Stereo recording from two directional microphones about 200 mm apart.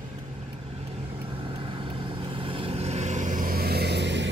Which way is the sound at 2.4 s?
25° right (ahead or behind).